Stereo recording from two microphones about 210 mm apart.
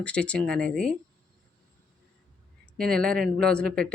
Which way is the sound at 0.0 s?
5° left (ahead or behind).